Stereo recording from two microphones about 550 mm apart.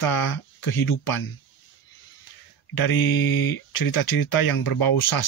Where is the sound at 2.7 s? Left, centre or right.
Left.